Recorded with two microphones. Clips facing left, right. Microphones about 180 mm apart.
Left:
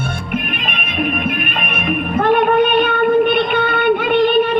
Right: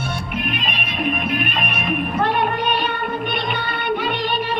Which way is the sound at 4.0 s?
55° left (ahead or behind).